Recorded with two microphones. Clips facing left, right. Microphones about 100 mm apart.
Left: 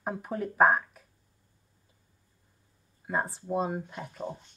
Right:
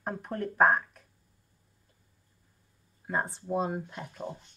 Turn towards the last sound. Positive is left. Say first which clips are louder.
# left 1 dB
turn(degrees=0)  # may be behind; listen again after turning